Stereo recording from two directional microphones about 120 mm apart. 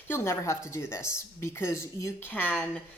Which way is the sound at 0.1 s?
25° left (ahead or behind).